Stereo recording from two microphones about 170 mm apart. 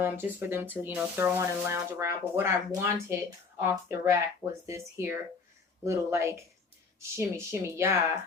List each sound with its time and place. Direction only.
0.0 s speech: 15° right (ahead or behind)